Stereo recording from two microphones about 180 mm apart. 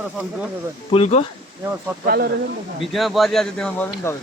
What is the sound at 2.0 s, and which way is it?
Speech, 55° right (ahead or behind).